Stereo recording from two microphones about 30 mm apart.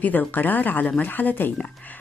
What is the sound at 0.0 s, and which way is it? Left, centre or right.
Speech, left.